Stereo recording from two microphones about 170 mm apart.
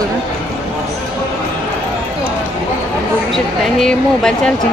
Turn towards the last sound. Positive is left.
turn(degrees=5)  # may be behind; listen again after turning